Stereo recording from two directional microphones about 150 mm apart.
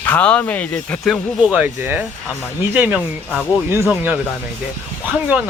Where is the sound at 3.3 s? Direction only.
10° left (ahead or behind).